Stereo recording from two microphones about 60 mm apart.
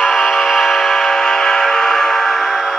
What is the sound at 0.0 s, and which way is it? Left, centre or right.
Music, centre.